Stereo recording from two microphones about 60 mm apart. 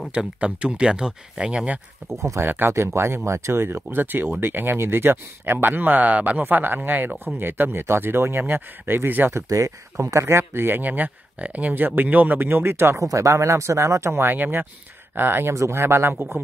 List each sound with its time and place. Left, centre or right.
0.1 s speech: centre
2.1 s speech: right
2.4 s speech: right
9.3 s speech: right
13.0 s speech: right
14.3 s speech: right
15.5 s speech: right